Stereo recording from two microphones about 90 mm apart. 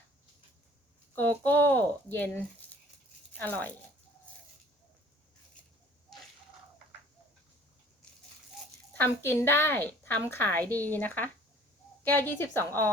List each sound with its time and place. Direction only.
1.1 s a sound: 20° left (ahead or behind)
3.3 s speech: 20° left (ahead or behind)
8.9 s a woman's voice: 20° left (ahead or behind)